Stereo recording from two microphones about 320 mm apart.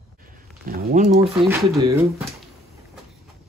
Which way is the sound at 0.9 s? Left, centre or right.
Right.